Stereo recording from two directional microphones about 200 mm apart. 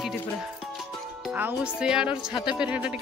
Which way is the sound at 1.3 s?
5° right (ahead or behind).